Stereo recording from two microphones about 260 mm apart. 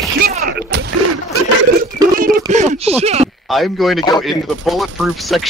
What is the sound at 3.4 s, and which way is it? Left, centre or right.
Speech, centre.